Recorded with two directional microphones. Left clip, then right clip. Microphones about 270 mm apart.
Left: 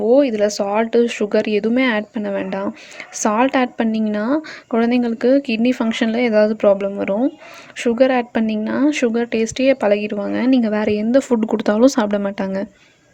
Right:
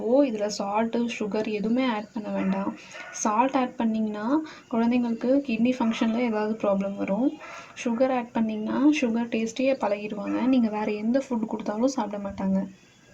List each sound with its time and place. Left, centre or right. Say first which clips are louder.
0.1 s a woman's voice: left 8 dB; left